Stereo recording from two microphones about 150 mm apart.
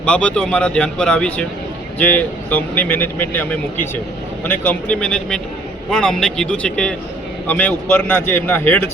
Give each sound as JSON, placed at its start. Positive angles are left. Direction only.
{"t": 0.0, "sound": "speech", "side_deg": 5}